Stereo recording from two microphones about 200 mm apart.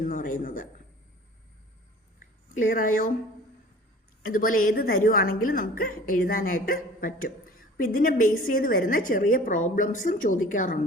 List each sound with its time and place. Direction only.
0.0 s a woman's voice: 45° left (ahead or behind)
2.6 s a woman's voice: 45° left (ahead or behind)
4.2 s a woman's voice: 45° left (ahead or behind)